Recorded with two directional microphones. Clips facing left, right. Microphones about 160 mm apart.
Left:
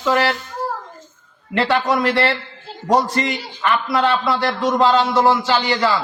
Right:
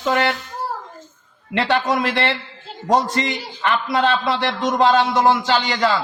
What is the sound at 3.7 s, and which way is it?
A man's voice, 20° right (ahead or behind).